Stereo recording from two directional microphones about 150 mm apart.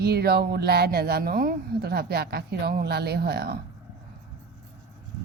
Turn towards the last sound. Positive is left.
turn(degrees=-90)